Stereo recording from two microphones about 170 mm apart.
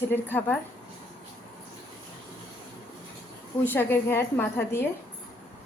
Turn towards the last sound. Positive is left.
turn(degrees=15)  # may be behind; listen again after turning